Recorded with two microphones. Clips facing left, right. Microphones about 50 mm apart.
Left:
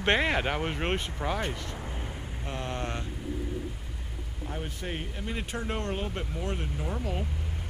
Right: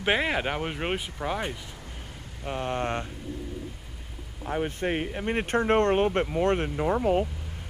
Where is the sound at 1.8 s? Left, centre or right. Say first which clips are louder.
Left 5 dB; left.